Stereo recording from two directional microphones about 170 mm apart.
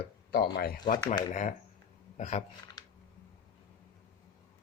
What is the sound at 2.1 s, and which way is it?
Speech, 45° left (ahead or behind).